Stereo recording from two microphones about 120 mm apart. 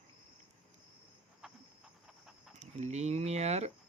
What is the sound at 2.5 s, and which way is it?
Speech, 70° right (ahead or behind).